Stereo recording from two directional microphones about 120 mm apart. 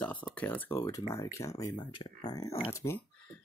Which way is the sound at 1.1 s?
25° left (ahead or behind).